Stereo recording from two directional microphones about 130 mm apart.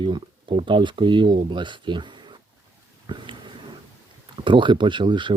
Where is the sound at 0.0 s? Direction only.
40° right (ahead or behind).